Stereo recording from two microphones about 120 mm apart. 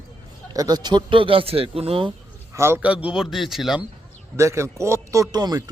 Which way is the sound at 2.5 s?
20° right (ahead or behind).